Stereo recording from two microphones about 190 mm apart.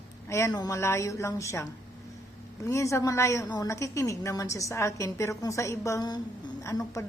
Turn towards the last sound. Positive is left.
turn(degrees=15)  # may be behind; listen again after turning